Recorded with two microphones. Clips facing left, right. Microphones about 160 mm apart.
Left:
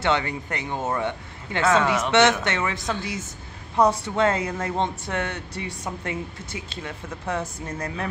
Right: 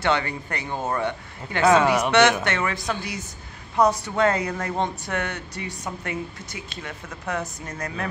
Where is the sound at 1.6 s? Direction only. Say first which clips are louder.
Right 3 dB; 15° right (ahead or behind).